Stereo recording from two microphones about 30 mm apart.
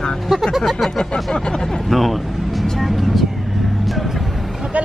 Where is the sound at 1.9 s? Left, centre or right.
Centre.